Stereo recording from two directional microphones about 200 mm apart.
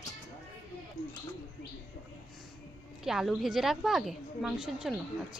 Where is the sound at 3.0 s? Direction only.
Centre (ahead or behind).